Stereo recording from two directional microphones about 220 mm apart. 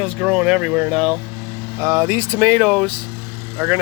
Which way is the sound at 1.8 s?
15° right (ahead or behind).